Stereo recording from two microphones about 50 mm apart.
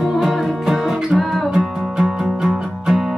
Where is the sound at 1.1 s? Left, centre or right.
Centre.